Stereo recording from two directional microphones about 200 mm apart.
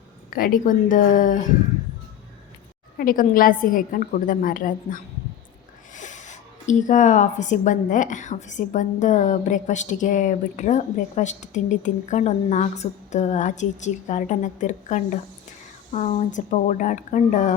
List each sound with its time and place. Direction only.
0.3 s speech: 45° left (ahead or behind)
3.0 s a woman's voice: 45° left (ahead or behind)